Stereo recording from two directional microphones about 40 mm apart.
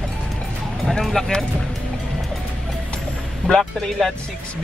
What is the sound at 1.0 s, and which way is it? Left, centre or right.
Speech, centre.